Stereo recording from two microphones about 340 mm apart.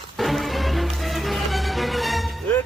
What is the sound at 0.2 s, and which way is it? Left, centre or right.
Music, centre.